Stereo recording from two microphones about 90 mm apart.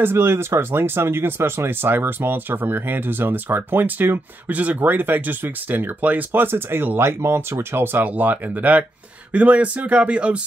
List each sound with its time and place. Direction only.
0.0 s speech: 25° right (ahead or behind)